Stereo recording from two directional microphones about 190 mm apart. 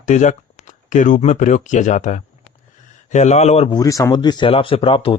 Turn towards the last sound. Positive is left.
turn(degrees=25)  # may be behind; listen again after turning